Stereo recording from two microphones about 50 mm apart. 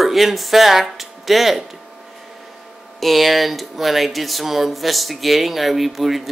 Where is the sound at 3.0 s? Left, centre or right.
Centre.